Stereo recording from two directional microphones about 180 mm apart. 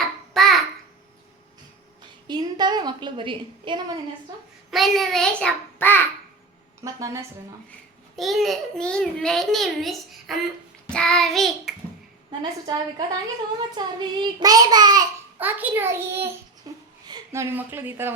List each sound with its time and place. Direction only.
0.0 s babbling: centre (ahead or behind)
2.2 s a woman's voice: 25° right (ahead or behind)
4.7 s a child's voice: centre (ahead or behind)
6.8 s a child's voice: 15° right (ahead or behind)
8.1 s a child's voice: centre (ahead or behind)
12.4 s child singing: 25° right (ahead or behind)
15.4 s a child's voice: 10° right (ahead or behind)
16.7 s a sound: 20° right (ahead or behind)
17.1 s speech: 15° right (ahead or behind)